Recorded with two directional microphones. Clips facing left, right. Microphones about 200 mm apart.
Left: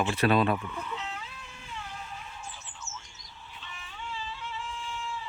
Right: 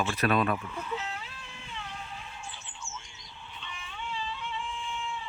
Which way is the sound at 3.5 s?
5° left (ahead or behind).